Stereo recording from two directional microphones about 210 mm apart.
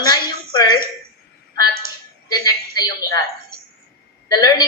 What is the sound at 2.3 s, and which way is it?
Speech, 20° left (ahead or behind).